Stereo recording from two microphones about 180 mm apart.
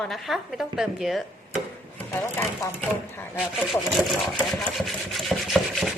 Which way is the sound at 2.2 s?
10° left (ahead or behind).